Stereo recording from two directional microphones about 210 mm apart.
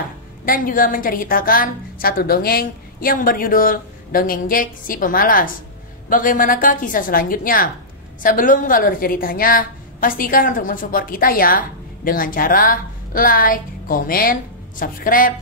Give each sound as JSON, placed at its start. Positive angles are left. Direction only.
{"t": 0.5, "sound": "a woman's voice", "side_deg": 40}